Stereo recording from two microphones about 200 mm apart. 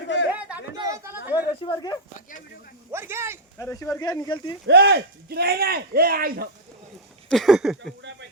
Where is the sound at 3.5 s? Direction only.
10° left (ahead or behind).